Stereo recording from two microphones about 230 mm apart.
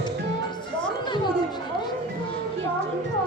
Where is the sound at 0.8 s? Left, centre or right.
Centre.